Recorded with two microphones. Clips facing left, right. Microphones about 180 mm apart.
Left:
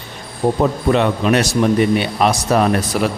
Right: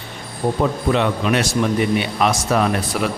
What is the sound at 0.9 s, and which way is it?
A man's voice, 40° left (ahead or behind).